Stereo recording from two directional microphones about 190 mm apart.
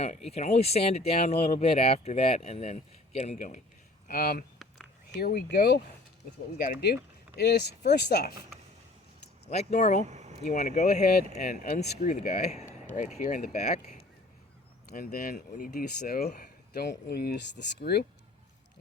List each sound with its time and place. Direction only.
0.3 s speech: 35° left (ahead or behind); by 8.4 s 55° left (ahead or behind)
9.5 s speech: 35° left (ahead or behind)
10.1 s a sound: 40° right (ahead or behind)
10.5 s speech: 40° left (ahead or behind)
14.9 s speech: 50° left (ahead or behind)